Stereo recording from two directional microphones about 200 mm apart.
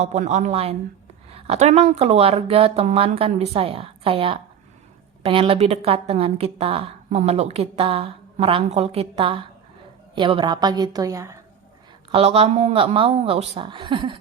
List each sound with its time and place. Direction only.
0.0 s a woman's voice: 35° right (ahead or behind); by 11.3 s 15° right (ahead or behind)
12.1 s a woman's voice: 30° right (ahead or behind)